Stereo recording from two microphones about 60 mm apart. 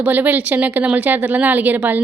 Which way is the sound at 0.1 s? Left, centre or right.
Right.